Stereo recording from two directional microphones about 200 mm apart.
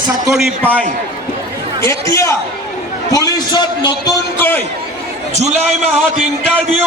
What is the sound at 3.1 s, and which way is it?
A man's voice, 20° left (ahead or behind).